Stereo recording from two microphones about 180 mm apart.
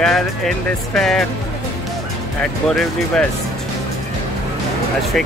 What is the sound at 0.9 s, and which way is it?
Speech, centre (ahead or behind).